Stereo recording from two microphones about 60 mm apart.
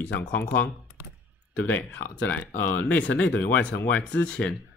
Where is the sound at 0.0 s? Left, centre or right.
Left.